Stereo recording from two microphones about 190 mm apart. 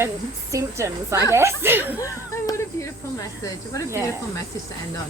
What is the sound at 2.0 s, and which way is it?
Speech, 15° left (ahead or behind).